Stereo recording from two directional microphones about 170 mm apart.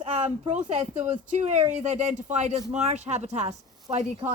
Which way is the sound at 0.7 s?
40° right (ahead or behind).